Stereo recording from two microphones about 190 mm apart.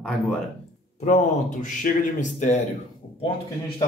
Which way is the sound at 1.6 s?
40° left (ahead or behind).